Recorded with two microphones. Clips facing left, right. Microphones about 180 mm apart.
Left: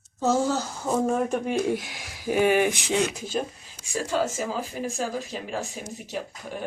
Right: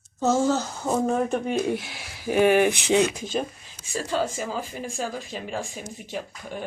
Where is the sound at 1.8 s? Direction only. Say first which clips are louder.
Even; 45° left (ahead or behind).